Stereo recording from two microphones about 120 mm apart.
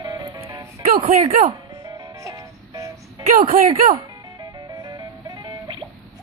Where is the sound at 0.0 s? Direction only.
30° right (ahead or behind).